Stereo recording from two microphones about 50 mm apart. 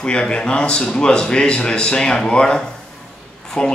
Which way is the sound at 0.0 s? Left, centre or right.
Centre.